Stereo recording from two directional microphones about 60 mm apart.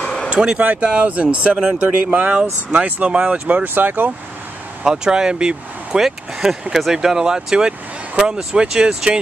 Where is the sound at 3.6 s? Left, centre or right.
Right.